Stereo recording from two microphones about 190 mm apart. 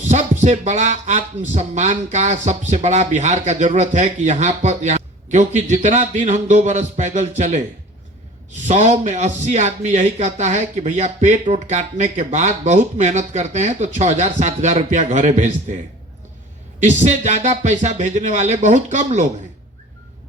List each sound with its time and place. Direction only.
0.0 s speech: 40° right (ahead or behind)
8.6 s speech: 40° right (ahead or behind)
16.8 s speech: 35° right (ahead or behind)